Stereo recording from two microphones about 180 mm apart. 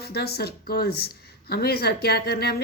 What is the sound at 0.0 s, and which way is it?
Speech, 60° left (ahead or behind).